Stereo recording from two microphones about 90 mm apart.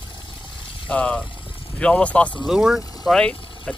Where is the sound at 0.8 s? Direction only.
15° left (ahead or behind).